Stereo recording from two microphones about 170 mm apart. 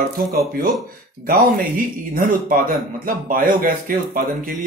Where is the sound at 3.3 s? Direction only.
55° right (ahead or behind).